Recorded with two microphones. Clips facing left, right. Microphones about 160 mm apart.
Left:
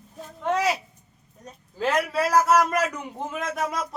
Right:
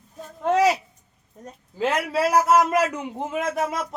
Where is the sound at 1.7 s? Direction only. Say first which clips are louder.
Right 1 dB; 25° right (ahead or behind).